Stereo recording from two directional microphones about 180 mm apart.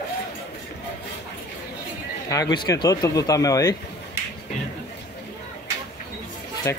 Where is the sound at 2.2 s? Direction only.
20° left (ahead or behind).